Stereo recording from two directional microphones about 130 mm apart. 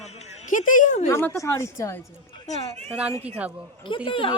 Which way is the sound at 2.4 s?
60° left (ahead or behind).